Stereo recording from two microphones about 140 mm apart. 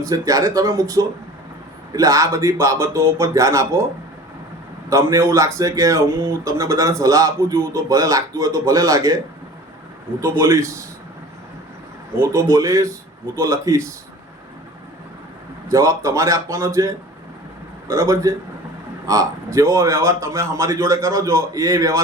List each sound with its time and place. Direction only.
0.0 s a man's voice: 25° right (ahead or behind)
4.9 s a man's voice: 20° right (ahead or behind)
10.2 s a man's voice: 20° right (ahead or behind)
12.1 s a man's voice: 20° right (ahead or behind)
15.7 s a man's voice: 20° right (ahead or behind)